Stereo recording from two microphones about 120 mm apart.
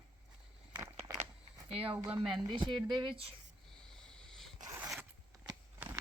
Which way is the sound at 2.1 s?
5° right (ahead or behind).